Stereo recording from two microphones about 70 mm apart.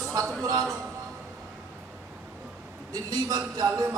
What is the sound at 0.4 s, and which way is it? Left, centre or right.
Speech, right.